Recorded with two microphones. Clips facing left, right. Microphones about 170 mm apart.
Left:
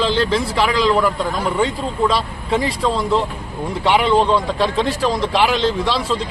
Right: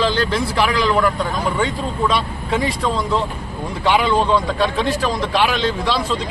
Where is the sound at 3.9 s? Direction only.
25° left (ahead or behind).